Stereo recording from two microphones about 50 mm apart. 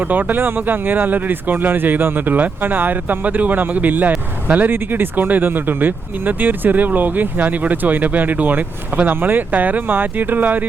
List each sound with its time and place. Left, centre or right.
0.0 s speech: right
4.7 s speech: right